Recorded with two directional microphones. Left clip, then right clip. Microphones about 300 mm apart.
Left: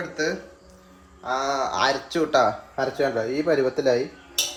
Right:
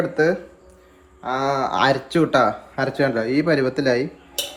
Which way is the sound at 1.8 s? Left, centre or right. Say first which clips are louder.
Right 6 dB; right.